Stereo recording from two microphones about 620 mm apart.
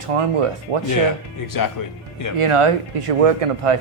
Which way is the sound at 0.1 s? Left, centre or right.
Right.